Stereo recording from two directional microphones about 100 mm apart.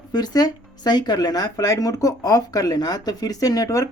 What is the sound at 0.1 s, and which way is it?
Speech, 45° left (ahead or behind).